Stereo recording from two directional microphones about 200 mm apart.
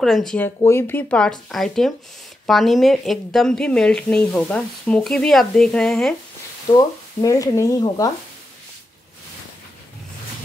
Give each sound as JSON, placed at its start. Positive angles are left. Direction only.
{"t": 0.0, "sound": "a woman's voice", "side_deg": 0}
{"t": 0.6, "sound": "a woman's voice", "side_deg": 10}
{"t": 6.7, "sound": "speech", "side_deg": 20}